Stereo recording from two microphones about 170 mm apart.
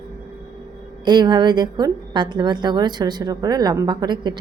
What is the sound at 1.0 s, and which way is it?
A woman's voice, 25° right (ahead or behind).